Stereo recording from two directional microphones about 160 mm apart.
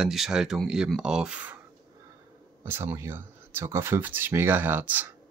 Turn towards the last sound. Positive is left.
turn(degrees=-10)  # may be behind; listen again after turning